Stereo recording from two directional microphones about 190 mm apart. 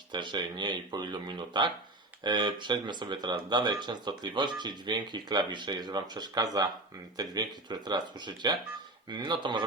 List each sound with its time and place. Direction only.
0.1 s speech: 25° right (ahead or behind)